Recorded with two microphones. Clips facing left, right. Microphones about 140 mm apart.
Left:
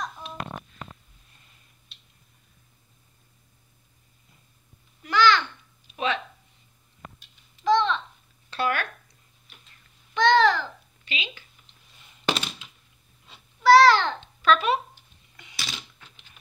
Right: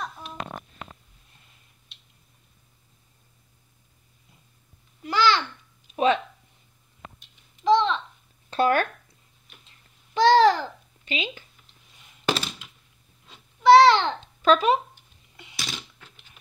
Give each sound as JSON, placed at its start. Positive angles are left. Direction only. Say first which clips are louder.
{"t": 5.0, "sound": "babbling", "louder": "left 1 dB", "side_deg": -30}
{"t": 7.6, "sound": "babbling", "louder": "right 2 dB", "side_deg": -25}
{"t": 8.5, "sound": "a sound", "louder": "right 6 dB", "side_deg": -45}
{"t": 10.1, "sound": "babbling", "louder": "right 3 dB", "side_deg": -35}
{"t": 12.3, "sound": "thunk", "louder": "right 1 dB", "side_deg": 0}
{"t": 13.6, "sound": "babbling", "louder": "right 1 dB", "side_deg": -25}
{"t": 14.4, "sound": "a sound", "louder": "right 2 dB", "side_deg": -40}
{"t": 15.5, "sound": "typing", "louder": "right 2 dB", "side_deg": 0}